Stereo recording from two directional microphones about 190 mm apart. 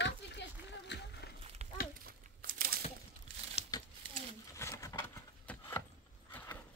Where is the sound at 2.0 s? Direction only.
50° right (ahead or behind).